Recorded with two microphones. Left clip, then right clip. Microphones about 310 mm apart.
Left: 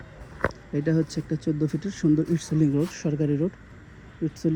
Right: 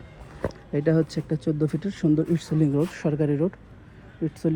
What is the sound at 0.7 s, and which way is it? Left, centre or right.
Speech, centre.